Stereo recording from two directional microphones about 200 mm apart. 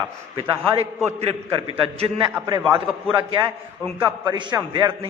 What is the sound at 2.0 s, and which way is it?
Speech, 20° right (ahead or behind).